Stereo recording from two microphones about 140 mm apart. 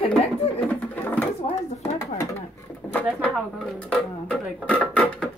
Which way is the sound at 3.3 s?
Centre (ahead or behind).